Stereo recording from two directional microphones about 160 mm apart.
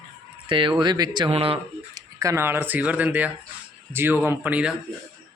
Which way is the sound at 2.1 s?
20° right (ahead or behind).